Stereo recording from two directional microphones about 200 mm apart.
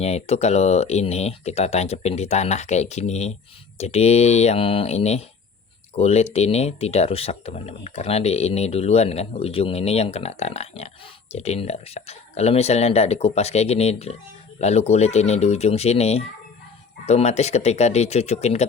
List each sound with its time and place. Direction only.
0.0 s speech: 30° left (ahead or behind)